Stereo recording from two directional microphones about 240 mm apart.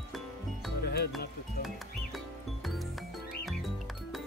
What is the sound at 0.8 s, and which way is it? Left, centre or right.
Music, left.